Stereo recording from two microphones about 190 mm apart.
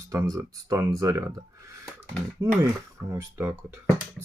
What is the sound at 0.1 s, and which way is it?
Speech, 20° right (ahead or behind).